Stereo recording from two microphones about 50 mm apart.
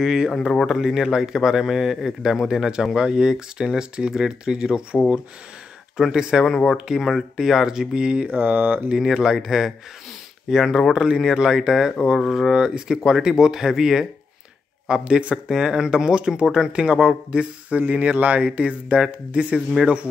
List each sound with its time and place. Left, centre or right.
0.0 s speech: centre
6.1 s speech: centre
8.3 s mantra: right
8.9 s speech: centre